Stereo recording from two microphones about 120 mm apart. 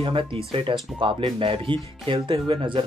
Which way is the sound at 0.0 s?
45° right (ahead or behind).